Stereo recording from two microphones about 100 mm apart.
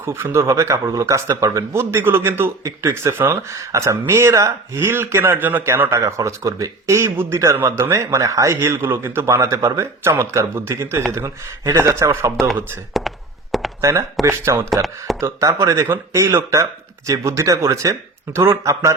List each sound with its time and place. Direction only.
0.0 s a man's voice: 25° right (ahead or behind)
12.9 s a sound: centre (ahead or behind)
14.3 s a man's voice: 30° right (ahead or behind)
14.7 s speech: centre (ahead or behind)
15.2 s a man's voice: 30° right (ahead or behind)